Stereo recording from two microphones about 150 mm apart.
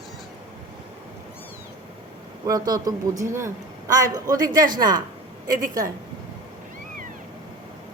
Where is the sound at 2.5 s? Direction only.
25° right (ahead or behind).